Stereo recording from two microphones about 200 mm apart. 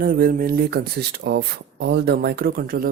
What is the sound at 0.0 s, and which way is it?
Speech, 50° right (ahead or behind).